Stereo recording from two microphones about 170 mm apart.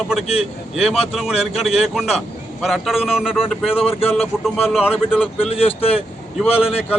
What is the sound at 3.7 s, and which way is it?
Speech, 35° left (ahead or behind).